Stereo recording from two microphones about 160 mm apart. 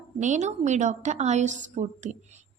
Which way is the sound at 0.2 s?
50° right (ahead or behind).